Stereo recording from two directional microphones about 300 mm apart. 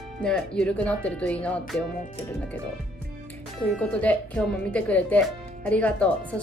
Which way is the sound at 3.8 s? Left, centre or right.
Centre.